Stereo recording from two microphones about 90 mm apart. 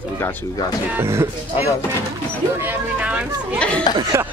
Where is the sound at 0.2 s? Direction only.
20° left (ahead or behind).